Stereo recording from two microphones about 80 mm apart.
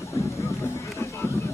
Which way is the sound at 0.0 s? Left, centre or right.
Left.